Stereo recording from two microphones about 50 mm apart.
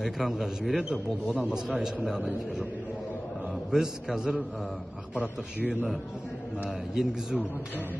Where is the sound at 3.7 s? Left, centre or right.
Centre.